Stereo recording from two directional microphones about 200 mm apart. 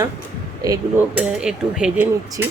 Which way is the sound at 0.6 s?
15° right (ahead or behind).